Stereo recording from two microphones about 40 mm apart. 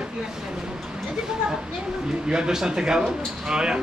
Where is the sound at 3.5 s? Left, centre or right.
Centre.